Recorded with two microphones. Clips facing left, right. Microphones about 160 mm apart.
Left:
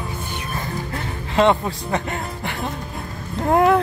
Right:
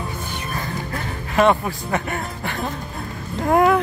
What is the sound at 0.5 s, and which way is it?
Music, 25° left (ahead or behind).